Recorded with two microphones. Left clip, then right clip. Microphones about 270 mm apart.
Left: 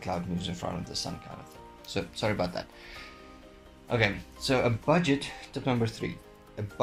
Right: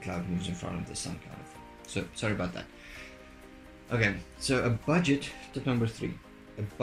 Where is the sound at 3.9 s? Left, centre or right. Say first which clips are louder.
Left 2 dB; centre.